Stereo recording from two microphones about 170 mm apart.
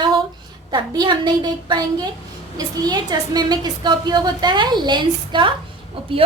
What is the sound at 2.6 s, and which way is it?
A woman's voice, 25° right (ahead or behind).